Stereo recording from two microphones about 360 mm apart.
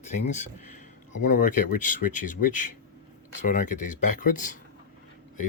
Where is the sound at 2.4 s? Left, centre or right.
Left.